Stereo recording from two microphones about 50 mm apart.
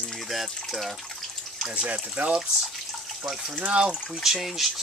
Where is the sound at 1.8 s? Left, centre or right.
Right.